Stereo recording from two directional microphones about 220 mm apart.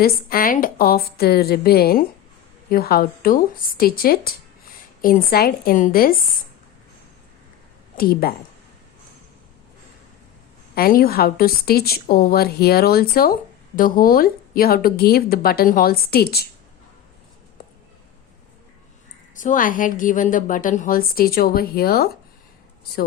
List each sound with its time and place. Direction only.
0.0 s a woman's voice: 40° left (ahead or behind)
7.9 s a woman's voice: 40° left (ahead or behind)
10.8 s a woman's voice: 40° left (ahead or behind)
19.4 s a woman's voice: 35° left (ahead or behind)